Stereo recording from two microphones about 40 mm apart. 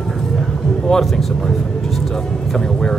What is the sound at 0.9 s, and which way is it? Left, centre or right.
Speech, centre.